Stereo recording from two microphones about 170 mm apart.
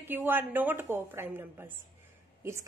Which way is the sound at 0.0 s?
10° right (ahead or behind).